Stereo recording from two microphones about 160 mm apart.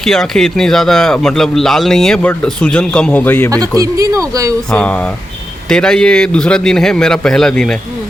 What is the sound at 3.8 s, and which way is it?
Speech, 20° right (ahead or behind).